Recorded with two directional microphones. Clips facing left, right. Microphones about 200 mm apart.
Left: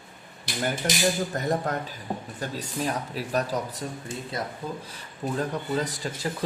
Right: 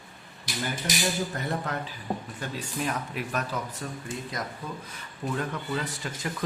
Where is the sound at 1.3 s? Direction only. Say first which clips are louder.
Left 4 dB; 40° left (ahead or behind).